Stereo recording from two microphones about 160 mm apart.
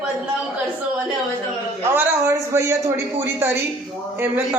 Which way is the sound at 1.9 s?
15° right (ahead or behind).